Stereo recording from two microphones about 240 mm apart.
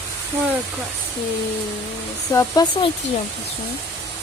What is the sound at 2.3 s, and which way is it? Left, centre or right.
Speech, centre.